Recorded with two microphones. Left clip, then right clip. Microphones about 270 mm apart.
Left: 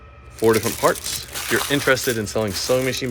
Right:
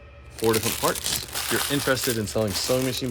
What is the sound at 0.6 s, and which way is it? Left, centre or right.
Speech, centre.